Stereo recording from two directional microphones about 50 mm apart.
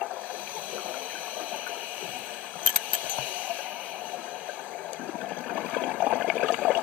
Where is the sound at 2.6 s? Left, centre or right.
Right.